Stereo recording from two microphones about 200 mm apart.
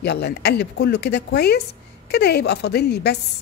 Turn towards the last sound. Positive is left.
turn(degrees=55)  # may be behind; listen again after turning